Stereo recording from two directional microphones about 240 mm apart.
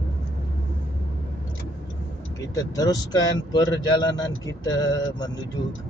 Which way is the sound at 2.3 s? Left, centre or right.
Centre.